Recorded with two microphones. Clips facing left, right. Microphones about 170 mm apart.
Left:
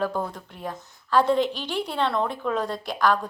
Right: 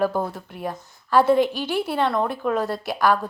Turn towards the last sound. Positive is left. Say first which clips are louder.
# right 2 dB
turn(degrees=-10)  # may be behind; listen again after turning